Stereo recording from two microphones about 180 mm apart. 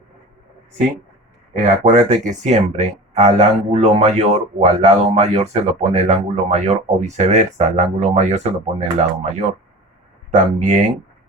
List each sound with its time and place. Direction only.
1.5 s speech: 40° right (ahead or behind)